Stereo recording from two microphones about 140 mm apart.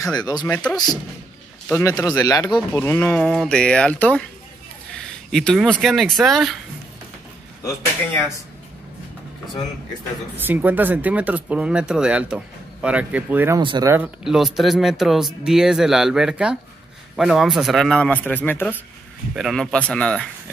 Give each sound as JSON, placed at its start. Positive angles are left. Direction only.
{"t": 0.0, "sound": "speech", "side_deg": 30}
{"t": 1.7, "sound": "speech", "side_deg": 20}
{"t": 7.6, "sound": "speech", "side_deg": 15}
{"t": 10.3, "sound": "speech", "side_deg": -15}
{"t": 13.6, "sound": "speech", "side_deg": -35}
{"t": 14.0, "sound": "speech", "side_deg": -5}
{"t": 19.3, "sound": "speech", "side_deg": 0}